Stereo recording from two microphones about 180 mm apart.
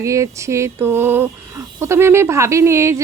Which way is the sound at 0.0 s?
15° right (ahead or behind).